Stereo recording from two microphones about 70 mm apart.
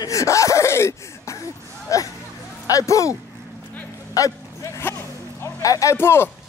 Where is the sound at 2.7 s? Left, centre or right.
Left.